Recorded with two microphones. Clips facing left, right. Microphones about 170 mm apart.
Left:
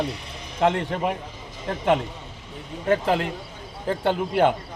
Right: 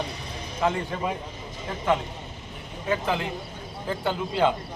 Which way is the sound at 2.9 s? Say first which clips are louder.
Left 5 dB; 65° left (ahead or behind).